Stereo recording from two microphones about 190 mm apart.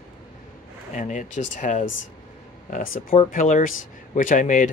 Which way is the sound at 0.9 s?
40° left (ahead or behind).